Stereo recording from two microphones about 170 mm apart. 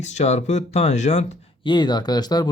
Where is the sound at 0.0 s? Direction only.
40° left (ahead or behind).